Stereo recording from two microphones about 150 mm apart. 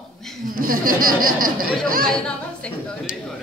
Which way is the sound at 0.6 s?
70° right (ahead or behind).